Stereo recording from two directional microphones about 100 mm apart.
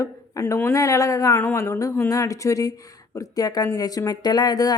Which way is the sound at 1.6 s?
35° left (ahead or behind).